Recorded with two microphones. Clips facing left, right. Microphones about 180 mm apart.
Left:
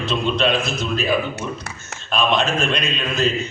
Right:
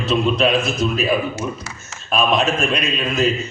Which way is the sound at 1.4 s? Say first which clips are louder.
Right 2 dB; 60° left (ahead or behind).